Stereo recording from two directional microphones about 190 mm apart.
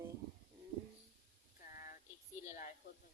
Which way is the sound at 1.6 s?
45° left (ahead or behind).